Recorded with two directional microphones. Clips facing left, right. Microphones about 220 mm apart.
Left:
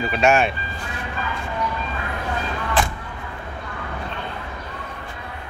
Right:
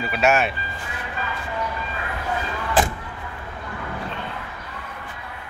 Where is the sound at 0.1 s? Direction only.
5° right (ahead or behind).